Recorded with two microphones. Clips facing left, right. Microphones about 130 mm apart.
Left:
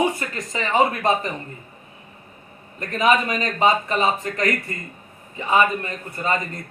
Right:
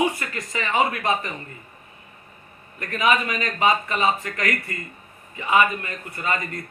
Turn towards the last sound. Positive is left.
turn(degrees=30)  # may be behind; listen again after turning